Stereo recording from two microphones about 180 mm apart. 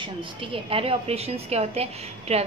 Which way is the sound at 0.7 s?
30° right (ahead or behind).